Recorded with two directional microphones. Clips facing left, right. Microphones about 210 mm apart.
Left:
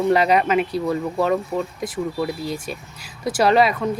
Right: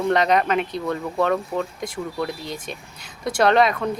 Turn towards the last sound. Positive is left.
turn(degrees=5)  # may be behind; listen again after turning